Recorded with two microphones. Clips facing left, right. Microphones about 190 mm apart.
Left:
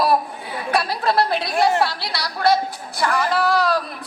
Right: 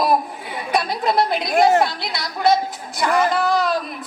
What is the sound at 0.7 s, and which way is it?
A woman's voice, 20° right (ahead or behind).